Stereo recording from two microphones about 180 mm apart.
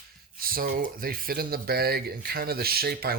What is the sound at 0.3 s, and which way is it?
Speech, 55° right (ahead or behind).